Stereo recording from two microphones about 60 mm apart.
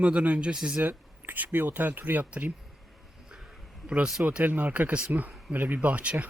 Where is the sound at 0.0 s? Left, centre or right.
Right.